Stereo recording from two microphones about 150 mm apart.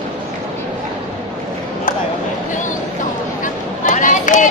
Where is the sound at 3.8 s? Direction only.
60° left (ahead or behind).